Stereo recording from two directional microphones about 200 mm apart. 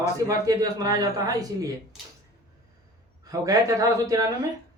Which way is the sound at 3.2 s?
15° right (ahead or behind).